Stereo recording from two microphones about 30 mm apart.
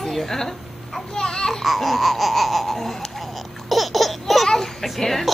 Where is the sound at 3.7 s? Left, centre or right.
Centre.